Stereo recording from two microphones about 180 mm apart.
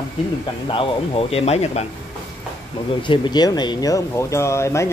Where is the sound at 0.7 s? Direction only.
30° left (ahead or behind).